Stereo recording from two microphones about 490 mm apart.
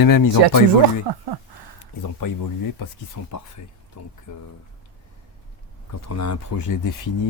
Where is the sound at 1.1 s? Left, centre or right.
Right.